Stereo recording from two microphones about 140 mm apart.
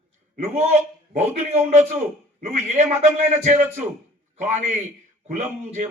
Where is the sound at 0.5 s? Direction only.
55° right (ahead or behind).